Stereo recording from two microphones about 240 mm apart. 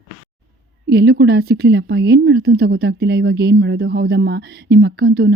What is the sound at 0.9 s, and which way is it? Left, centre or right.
A woman's voice, right.